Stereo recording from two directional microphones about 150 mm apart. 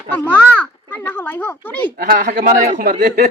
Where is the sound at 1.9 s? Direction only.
80° right.